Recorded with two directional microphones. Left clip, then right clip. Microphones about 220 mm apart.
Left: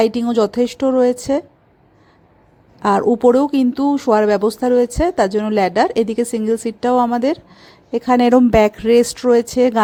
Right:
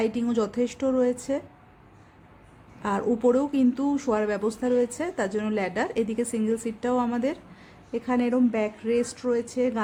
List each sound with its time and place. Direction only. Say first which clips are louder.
0.0 s speech: left 11 dB; 35° left (ahead or behind)
2.8 s speech: left 11 dB; 35° left (ahead or behind)